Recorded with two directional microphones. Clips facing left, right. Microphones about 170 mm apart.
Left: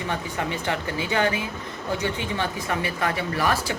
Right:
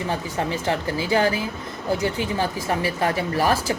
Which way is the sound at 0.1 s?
35° right (ahead or behind).